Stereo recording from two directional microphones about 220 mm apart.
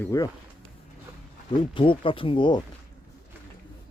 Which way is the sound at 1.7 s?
25° left (ahead or behind).